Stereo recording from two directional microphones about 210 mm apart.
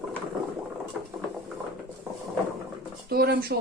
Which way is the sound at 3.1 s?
50° right (ahead or behind).